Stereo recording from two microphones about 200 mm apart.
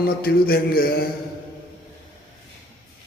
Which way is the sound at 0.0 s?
50° left (ahead or behind).